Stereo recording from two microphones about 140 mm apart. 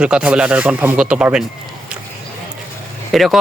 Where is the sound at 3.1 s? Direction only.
Centre (ahead or behind).